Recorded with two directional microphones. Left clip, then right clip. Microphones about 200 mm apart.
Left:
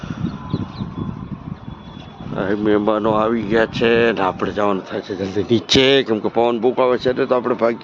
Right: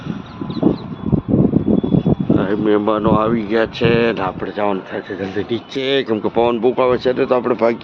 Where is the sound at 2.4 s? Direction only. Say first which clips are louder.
Left 3 dB; 5° left (ahead or behind).